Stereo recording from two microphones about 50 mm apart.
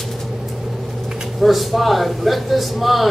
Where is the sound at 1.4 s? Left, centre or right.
Centre.